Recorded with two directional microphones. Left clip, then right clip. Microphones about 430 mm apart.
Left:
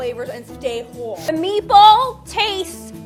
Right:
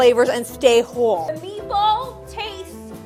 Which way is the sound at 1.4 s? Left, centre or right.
Left.